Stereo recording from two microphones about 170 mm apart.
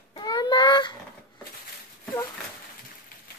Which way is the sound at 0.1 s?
25° left (ahead or behind).